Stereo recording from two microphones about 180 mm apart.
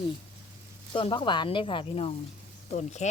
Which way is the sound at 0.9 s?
30° left (ahead or behind).